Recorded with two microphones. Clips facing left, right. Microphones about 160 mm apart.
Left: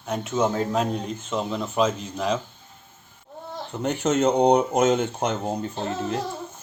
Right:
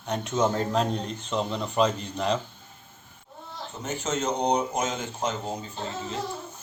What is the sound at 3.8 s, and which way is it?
Speech, 60° left (ahead or behind).